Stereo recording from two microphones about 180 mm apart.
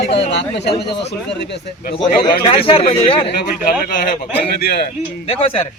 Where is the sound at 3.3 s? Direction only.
55° left (ahead or behind).